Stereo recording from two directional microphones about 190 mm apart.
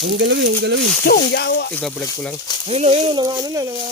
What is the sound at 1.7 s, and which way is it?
Speech, 5° left (ahead or behind).